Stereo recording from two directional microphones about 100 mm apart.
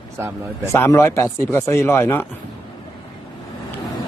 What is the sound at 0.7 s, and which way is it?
Speech, 30° left (ahead or behind).